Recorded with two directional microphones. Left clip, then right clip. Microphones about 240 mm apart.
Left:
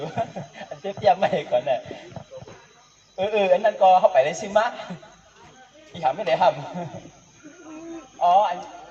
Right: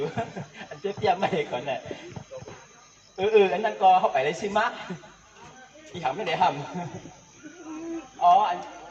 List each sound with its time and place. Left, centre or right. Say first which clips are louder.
0.0 s speech: left 2 dB; left
2.3 s a sound: right 2 dB; centre
3.2 s a man's voice: left 1 dB; left
5.9 s a man's voice: left 6 dB; left
8.2 s a man's voice: left 1 dB; left